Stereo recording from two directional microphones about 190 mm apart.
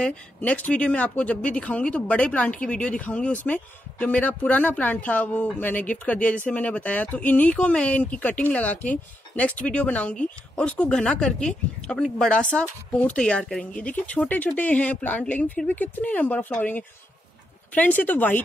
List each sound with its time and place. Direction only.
0.0 s speech: 5° left (ahead or behind)